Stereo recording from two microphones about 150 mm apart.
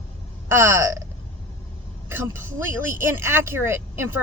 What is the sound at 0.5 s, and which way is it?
Speech, 15° right (ahead or behind).